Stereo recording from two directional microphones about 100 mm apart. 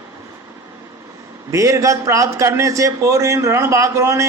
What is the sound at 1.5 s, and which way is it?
A man's voice, 30° right (ahead or behind).